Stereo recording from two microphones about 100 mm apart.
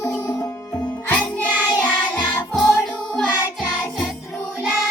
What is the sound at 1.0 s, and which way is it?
Music, 10° left (ahead or behind).